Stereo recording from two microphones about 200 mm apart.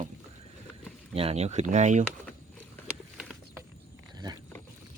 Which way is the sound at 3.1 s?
5° right (ahead or behind).